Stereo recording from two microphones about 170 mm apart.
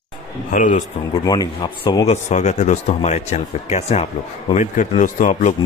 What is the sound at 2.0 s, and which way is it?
Speech, 45° left (ahead or behind).